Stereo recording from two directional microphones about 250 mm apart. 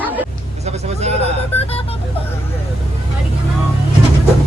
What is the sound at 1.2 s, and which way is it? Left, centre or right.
Speech, left.